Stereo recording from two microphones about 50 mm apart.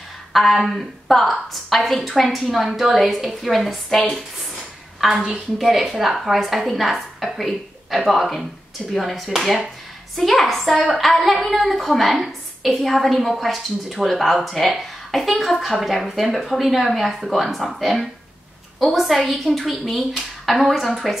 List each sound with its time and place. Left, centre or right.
0.3 s a woman's voice: centre
5.0 s a woman's voice: centre